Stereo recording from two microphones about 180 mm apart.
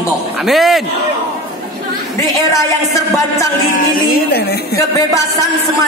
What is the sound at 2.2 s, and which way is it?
Speech, 15° left (ahead or behind).